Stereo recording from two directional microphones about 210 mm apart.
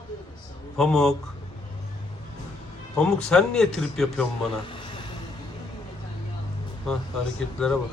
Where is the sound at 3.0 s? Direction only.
5° left (ahead or behind).